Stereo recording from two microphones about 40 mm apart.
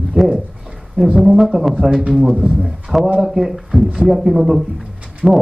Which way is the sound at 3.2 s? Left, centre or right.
Centre.